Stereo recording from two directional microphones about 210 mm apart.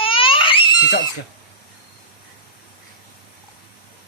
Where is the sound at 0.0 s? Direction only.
25° left (ahead or behind).